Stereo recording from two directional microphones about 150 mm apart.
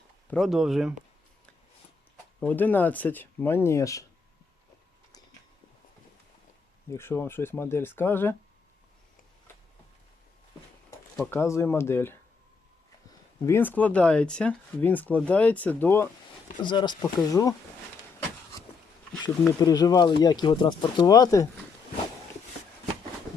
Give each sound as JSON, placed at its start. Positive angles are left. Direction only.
{"t": 0.3, "sound": "speech", "side_deg": 0}
{"t": 2.4, "sound": "speech", "side_deg": 10}
{"t": 6.9, "sound": "speech", "side_deg": 15}
{"t": 11.2, "sound": "speech", "side_deg": 20}
{"t": 16.6, "sound": "speech", "side_deg": 30}
{"t": 19.5, "sound": "speech", "side_deg": 25}